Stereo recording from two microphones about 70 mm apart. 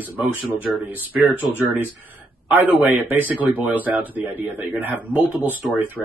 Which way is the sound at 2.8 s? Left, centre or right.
Right.